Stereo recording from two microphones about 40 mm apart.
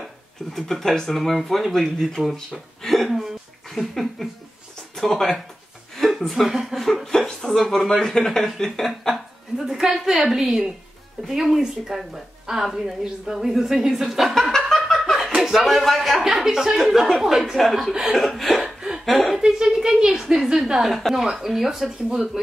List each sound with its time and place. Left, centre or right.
0.0 s speech: centre
5.9 s a sound: centre
6.7 s speech: centre
9.1 s a woman's voice: centre
14.7 s laughter: centre
15.1 s speech: centre
18.6 s chuckle: centre
19.0 s speech: centre
19.3 s a woman's voice: centre